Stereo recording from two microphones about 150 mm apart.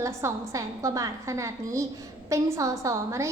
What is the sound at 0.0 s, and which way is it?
A woman's voice, 20° right (ahead or behind).